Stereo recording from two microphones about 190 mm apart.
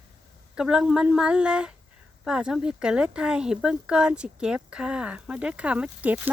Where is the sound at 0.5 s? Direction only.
5° right (ahead or behind).